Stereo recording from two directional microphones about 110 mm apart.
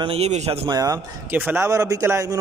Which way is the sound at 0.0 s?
65° right (ahead or behind).